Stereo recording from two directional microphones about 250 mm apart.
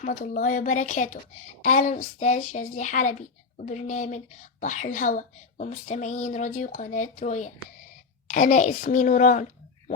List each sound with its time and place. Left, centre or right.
0.0 s a woman's voice: left